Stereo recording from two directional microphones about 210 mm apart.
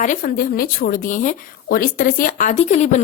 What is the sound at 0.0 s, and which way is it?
A woman's voice, 40° left (ahead or behind).